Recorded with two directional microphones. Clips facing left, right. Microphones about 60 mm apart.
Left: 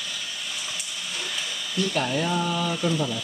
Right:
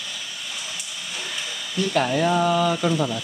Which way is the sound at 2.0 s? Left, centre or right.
Right.